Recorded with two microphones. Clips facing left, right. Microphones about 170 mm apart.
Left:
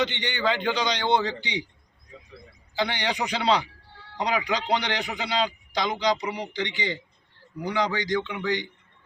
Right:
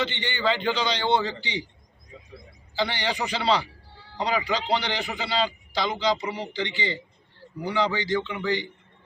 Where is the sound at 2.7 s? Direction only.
15° left (ahead or behind).